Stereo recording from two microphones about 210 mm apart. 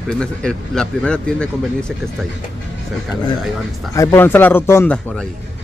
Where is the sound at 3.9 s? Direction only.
10° left (ahead or behind).